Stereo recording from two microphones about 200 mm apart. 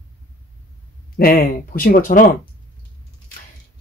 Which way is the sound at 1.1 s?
50° left (ahead or behind).